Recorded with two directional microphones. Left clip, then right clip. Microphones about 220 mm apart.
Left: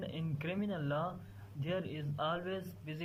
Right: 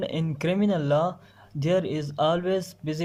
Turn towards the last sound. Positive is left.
turn(degrees=-30)  # may be behind; listen again after turning